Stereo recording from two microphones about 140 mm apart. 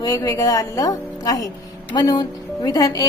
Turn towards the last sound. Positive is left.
turn(degrees=25)  # may be behind; listen again after turning